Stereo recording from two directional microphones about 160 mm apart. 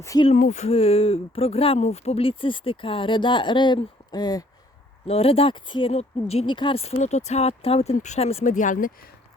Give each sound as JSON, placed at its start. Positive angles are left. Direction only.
{"t": 0.0, "sound": "speech", "side_deg": 20}
{"t": 0.3, "sound": "speech", "side_deg": 50}
{"t": 5.0, "sound": "speech", "side_deg": 35}